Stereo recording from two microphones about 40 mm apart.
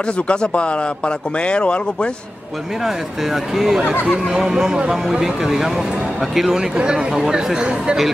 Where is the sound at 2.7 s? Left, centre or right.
Centre.